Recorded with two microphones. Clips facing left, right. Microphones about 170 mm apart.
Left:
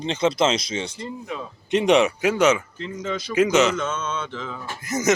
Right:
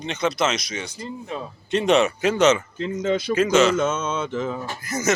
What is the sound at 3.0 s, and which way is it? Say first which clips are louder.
Speech: right 6 dB; 55° right (ahead or behind).